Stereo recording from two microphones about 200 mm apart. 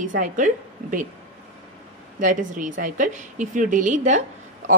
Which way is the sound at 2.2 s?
40° right (ahead or behind).